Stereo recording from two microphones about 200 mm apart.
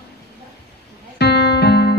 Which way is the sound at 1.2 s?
55° left (ahead or behind).